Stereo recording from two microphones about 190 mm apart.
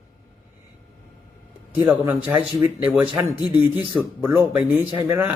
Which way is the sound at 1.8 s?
10° right (ahead or behind).